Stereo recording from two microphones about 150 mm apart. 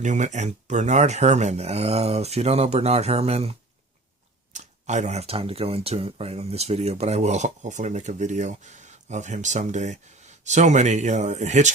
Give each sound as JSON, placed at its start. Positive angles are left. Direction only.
{"t": 0.0, "sound": "speech", "side_deg": -55}
{"t": 4.5, "sound": "speech", "side_deg": -50}